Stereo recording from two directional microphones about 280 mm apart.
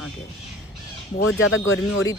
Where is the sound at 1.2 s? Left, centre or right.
Left.